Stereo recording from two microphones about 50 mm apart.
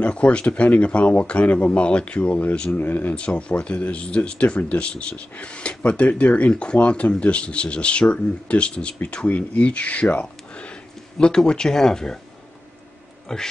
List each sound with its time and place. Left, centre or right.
0.0 s speech: left
2.7 s speech: left
3.2 s speech: left
13.3 s speech: centre